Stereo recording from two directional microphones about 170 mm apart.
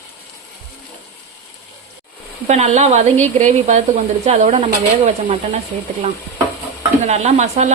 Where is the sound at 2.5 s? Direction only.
40° right (ahead or behind).